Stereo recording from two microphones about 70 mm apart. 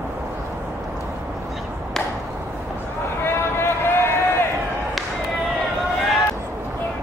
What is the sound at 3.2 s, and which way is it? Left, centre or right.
Run, left.